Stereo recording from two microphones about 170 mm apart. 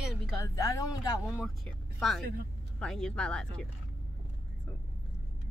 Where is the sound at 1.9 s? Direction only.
Centre (ahead or behind).